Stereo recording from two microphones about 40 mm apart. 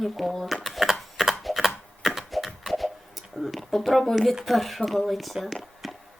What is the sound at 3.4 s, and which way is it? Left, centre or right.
Speech, centre.